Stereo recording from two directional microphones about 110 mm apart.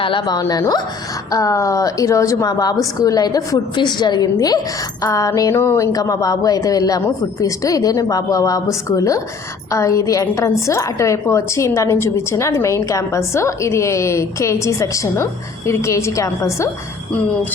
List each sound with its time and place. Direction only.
0.3 s a woman's voice: 35° left (ahead or behind)